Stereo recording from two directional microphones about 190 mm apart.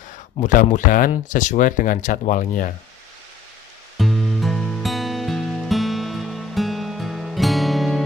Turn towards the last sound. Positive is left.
turn(degrees=0)  # may be behind; listen again after turning